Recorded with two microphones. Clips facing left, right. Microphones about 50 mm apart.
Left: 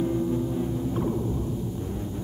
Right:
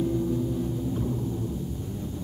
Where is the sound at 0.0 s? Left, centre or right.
Left.